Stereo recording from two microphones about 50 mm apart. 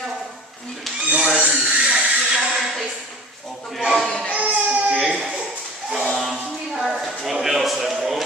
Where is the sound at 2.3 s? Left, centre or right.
Centre.